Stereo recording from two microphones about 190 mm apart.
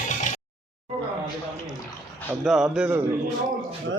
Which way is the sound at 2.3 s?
5° right (ahead or behind).